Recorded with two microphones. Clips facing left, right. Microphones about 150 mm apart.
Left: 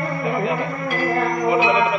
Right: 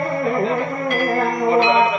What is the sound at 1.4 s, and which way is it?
Music, 10° left (ahead or behind).